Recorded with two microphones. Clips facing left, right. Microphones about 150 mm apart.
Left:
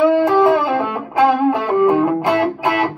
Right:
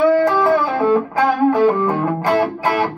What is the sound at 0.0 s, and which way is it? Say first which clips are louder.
Music: left 1 dB; 20° left (ahead or behind).